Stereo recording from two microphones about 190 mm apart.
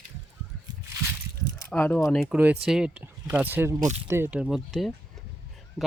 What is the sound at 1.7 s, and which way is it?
Speech, 10° left (ahead or behind).